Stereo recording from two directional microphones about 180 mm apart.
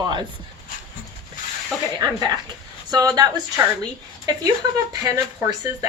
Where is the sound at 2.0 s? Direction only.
20° right (ahead or behind).